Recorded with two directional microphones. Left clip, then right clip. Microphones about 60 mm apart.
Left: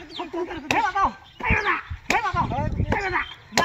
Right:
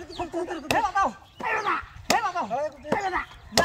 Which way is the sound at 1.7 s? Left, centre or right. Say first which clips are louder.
Left 1 dB; right.